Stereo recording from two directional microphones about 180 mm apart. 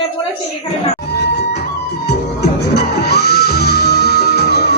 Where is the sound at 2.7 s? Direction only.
65° left (ahead or behind).